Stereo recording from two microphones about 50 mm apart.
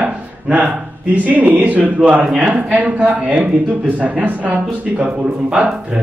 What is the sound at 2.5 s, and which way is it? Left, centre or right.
A man's voice, right.